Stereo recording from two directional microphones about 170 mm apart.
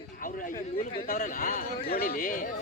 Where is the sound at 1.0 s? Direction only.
50° left (ahead or behind).